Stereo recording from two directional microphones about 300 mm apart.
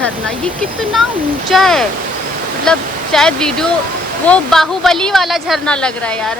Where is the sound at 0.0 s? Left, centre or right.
Centre.